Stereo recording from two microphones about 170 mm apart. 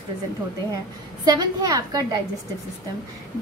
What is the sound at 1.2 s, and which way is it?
Speech, 25° right (ahead or behind).